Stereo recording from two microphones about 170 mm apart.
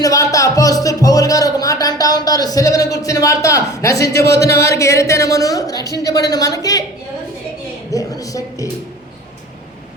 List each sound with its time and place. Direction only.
0.0 s speech: 20° left (ahead or behind)
7.9 s speech: 20° left (ahead or behind)